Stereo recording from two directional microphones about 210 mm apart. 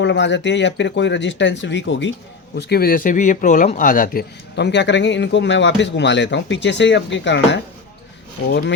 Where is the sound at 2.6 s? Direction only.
50° left (ahead or behind).